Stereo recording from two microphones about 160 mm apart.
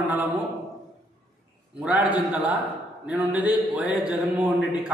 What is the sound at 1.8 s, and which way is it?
A man's voice, 5° right (ahead or behind).